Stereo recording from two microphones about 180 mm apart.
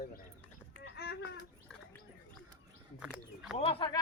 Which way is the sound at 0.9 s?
65° left (ahead or behind).